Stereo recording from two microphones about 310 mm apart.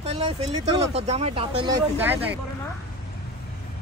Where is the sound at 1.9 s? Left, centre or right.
Centre.